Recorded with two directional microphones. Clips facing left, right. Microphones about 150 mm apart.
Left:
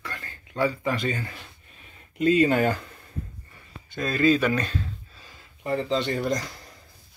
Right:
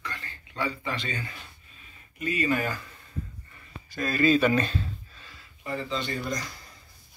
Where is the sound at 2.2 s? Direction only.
70° left (ahead or behind).